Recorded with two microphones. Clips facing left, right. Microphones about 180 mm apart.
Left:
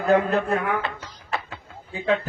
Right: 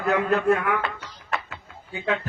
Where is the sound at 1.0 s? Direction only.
35° left (ahead or behind).